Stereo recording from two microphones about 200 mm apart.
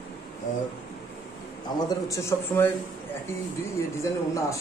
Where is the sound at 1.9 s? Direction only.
15° left (ahead or behind).